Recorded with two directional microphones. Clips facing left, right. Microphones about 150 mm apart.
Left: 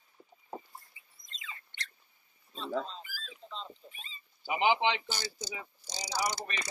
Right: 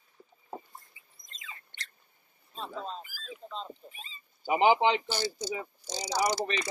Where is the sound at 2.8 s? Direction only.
50° right (ahead or behind).